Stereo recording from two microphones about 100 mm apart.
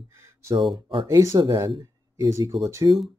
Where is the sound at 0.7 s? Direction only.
60° right (ahead or behind).